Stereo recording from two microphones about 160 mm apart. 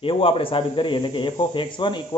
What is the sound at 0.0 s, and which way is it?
Speech, 35° left (ahead or behind).